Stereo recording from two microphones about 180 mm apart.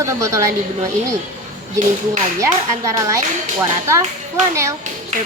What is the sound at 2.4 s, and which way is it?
Speech, 15° right (ahead or behind).